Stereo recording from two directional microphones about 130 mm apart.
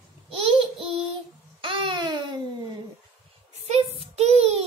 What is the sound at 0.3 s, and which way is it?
Babbling, 45° right (ahead or behind).